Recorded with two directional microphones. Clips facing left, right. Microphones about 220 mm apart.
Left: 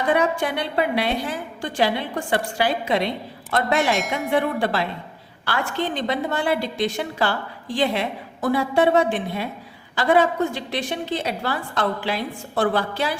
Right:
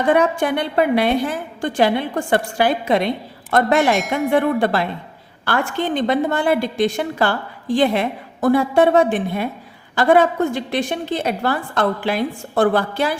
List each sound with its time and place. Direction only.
0.1 s a woman's voice: 50° right (ahead or behind)